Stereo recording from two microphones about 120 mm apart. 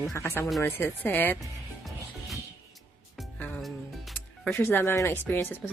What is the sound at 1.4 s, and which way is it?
Music, centre (ahead or behind).